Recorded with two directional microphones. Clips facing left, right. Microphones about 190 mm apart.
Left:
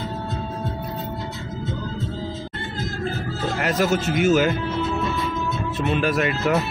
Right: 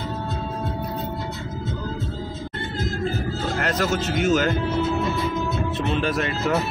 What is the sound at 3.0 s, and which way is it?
Music, centre (ahead or behind).